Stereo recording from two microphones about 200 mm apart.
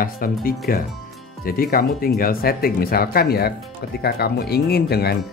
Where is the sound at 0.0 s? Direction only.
45° left (ahead or behind).